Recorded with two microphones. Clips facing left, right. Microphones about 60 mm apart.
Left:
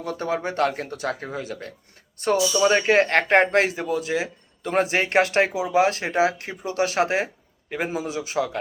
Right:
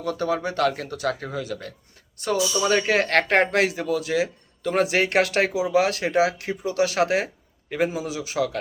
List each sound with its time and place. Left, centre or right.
0.0 s a man's voice: left